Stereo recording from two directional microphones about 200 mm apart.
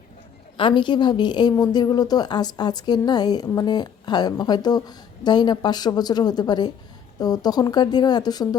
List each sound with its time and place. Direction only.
0.5 s a woman's voice: 25° left (ahead or behind)